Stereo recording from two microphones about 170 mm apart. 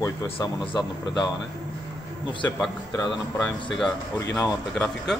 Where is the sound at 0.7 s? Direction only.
25° left (ahead or behind).